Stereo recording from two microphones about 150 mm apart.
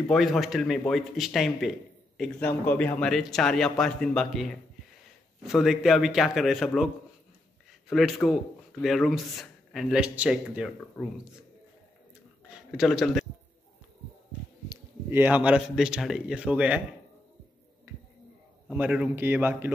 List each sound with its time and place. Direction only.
0.1 s speech: centre (ahead or behind)
2.4 s speech: 10° left (ahead or behind)
7.9 s speech: centre (ahead or behind)
12.4 s a sound: 5° right (ahead or behind)
14.7 s speech: 15° right (ahead or behind)
17.9 s a sound: 15° right (ahead or behind)
18.7 s speech: 5° right (ahead or behind)